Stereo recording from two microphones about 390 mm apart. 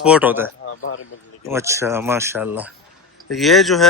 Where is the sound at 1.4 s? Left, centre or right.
Centre.